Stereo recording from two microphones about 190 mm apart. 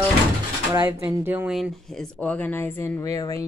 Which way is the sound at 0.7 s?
10° right (ahead or behind).